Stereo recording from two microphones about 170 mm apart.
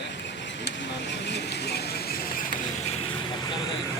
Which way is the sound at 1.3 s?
85° left.